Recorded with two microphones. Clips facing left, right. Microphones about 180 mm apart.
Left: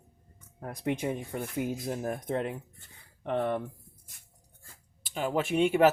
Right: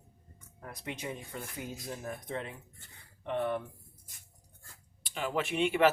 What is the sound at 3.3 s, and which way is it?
Speech, 40° left (ahead or behind).